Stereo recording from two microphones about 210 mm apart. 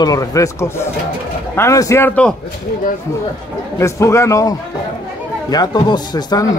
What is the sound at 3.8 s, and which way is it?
A man's voice, 15° left (ahead or behind).